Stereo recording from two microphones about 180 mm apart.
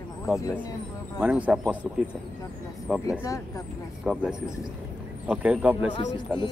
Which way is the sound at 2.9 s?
5° right (ahead or behind).